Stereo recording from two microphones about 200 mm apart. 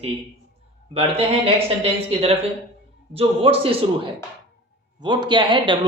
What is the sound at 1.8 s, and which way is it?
Speech, 30° right (ahead or behind).